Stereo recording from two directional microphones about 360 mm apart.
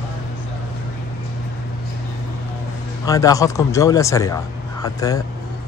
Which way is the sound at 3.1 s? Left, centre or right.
Centre.